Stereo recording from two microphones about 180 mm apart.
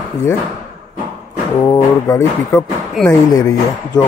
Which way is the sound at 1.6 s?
15° left (ahead or behind).